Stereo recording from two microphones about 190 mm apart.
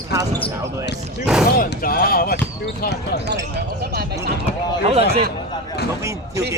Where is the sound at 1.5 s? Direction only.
50° left (ahead or behind).